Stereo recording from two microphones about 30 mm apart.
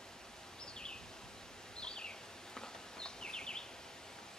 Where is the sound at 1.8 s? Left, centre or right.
Left.